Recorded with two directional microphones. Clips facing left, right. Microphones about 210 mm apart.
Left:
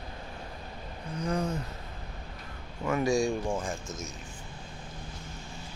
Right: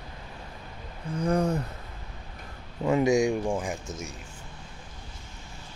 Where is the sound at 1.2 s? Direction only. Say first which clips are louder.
Right 6 dB; 65° right (ahead or behind).